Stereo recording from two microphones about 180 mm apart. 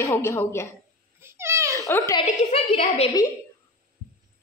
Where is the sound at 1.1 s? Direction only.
15° right (ahead or behind).